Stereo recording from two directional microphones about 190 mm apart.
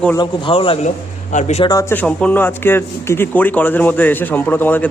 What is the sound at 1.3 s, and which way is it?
Speech, 40° left (ahead or behind).